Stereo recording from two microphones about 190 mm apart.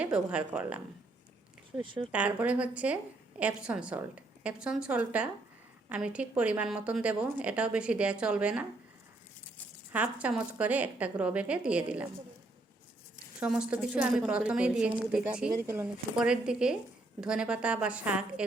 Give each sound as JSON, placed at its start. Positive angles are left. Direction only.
{"t": 0.0, "sound": "a woman's voice", "side_deg": -5}
{"t": 1.8, "sound": "speech", "side_deg": -25}
{"t": 2.1, "sound": "a woman's voice", "side_deg": -5}
{"t": 9.9, "sound": "a woman's voice", "side_deg": -10}
{"t": 13.4, "sound": "a woman's voice", "side_deg": -5}